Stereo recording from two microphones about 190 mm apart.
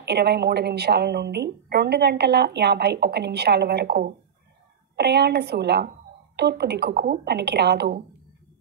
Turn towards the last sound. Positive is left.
turn(degrees=-60)  # may be behind; listen again after turning